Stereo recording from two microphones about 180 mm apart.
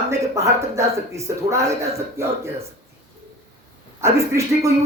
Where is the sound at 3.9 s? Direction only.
15° right (ahead or behind).